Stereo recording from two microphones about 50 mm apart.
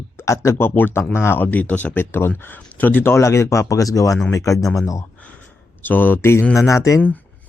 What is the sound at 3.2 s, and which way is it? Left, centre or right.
Speech, left.